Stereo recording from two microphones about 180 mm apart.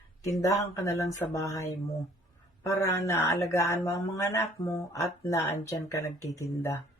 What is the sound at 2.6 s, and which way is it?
Speech, 15° left (ahead or behind).